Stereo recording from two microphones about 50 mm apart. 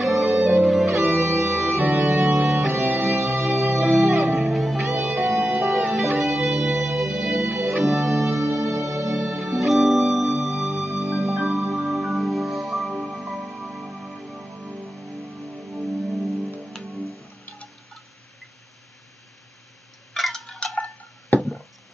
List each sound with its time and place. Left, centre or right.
0.0 s music: centre
0.8 s music: right
1.2 s music: right
1.8 s music: right
2.3 s music: centre
2.7 s music: right
3.3 s music: centre
20.2 s tick-tock: centre
20.5 s a sound: left
21.4 s chop: centre